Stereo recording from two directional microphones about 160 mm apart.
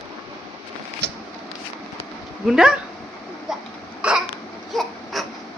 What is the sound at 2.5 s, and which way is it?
Speech, 5° right (ahead or behind).